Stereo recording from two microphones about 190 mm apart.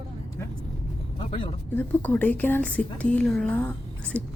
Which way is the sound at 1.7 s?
10° left (ahead or behind).